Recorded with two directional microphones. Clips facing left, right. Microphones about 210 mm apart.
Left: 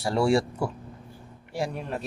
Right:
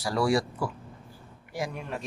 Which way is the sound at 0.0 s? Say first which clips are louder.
Left 3 dB; 25° left (ahead or behind).